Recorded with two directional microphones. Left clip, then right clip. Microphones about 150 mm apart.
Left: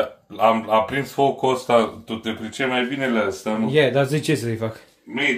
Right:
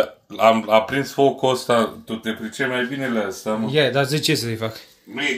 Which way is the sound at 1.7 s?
60° right (ahead or behind).